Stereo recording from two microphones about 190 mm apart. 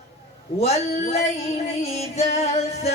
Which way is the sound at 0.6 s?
35° left (ahead or behind).